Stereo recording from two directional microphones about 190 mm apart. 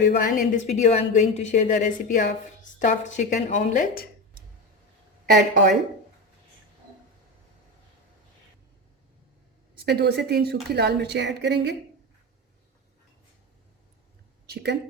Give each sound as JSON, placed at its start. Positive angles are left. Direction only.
{"t": 0.1, "sound": "a woman's voice", "side_deg": 40}
{"t": 5.3, "sound": "speech", "side_deg": -45}
{"t": 9.7, "sound": "speech", "side_deg": -60}
{"t": 14.4, "sound": "a woman's voice", "side_deg": -60}